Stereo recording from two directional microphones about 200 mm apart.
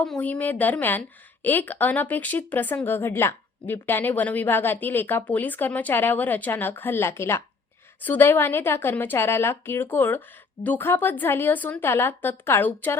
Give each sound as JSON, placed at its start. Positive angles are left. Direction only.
{"t": 0.0, "sound": "a woman's voice", "side_deg": 5}